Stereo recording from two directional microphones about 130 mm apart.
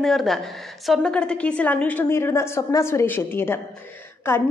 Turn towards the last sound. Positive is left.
turn(degrees=20)  # may be behind; listen again after turning